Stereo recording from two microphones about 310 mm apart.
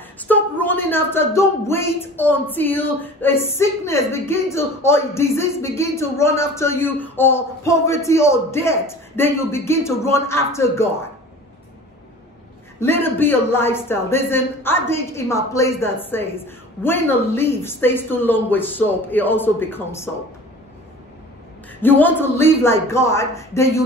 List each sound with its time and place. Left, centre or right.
0.2 s speech: centre
12.8 s speech: centre
21.8 s speech: centre